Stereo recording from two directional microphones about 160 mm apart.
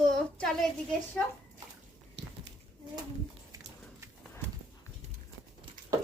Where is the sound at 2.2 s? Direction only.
90° right.